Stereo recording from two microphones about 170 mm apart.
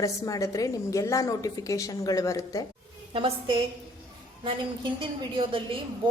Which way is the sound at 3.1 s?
30° right (ahead or behind).